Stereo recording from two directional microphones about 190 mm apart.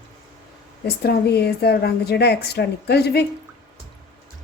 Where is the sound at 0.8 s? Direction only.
55° left (ahead or behind).